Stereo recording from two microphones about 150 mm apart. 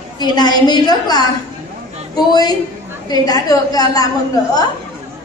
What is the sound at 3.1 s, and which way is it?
A woman's voice, 25° left (ahead or behind).